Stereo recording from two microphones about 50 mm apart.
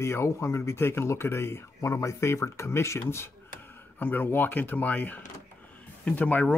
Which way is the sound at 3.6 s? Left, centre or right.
Left.